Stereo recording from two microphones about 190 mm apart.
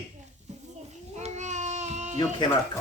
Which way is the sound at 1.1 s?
35° right (ahead or behind).